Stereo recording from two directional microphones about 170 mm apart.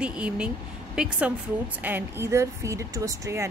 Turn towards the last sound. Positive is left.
turn(degrees=-20)  # may be behind; listen again after turning